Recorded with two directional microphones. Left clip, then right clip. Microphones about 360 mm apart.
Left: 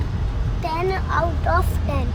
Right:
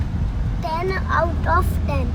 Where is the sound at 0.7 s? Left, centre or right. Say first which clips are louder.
Right 1 dB; centre.